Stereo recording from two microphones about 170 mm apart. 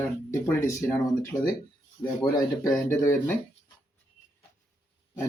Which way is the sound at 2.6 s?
15° left (ahead or behind).